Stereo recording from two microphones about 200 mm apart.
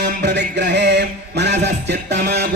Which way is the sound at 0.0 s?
60° right (ahead or behind).